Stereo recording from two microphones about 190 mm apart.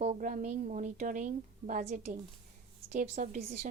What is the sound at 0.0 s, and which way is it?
A woman's voice, 40° right (ahead or behind).